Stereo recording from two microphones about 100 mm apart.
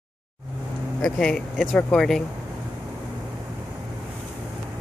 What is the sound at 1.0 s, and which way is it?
Speech, 5° left (ahead or behind).